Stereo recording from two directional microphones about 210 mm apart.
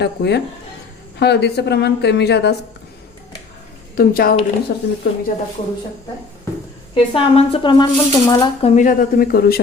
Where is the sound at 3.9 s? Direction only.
45° left (ahead or behind).